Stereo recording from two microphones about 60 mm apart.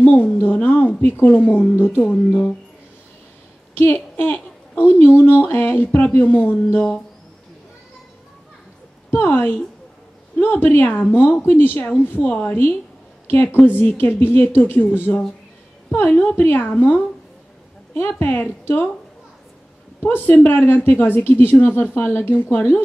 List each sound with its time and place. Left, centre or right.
0.0 s a sound: left
0.4 s a woman's voice: left
2.0 s a woman's voice: centre
3.7 s a woman's voice: left
9.1 s a woman's voice: left
12.0 s a woman's voice: left
18.0 s a woman's voice: left
20.0 s a woman's voice: left